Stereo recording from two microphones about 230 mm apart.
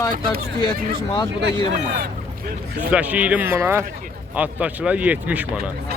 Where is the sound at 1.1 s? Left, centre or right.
Centre.